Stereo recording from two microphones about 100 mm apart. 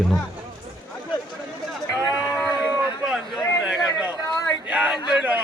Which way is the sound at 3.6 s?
10° right (ahead or behind).